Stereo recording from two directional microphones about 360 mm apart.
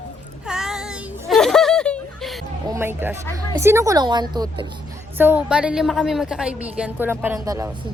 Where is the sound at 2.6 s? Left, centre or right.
Centre.